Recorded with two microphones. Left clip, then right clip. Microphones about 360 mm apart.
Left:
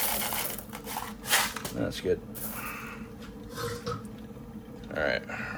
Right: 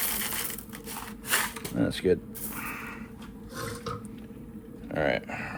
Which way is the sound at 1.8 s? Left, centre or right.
Right.